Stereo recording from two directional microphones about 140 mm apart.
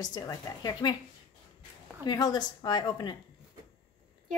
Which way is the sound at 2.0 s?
30° left (ahead or behind).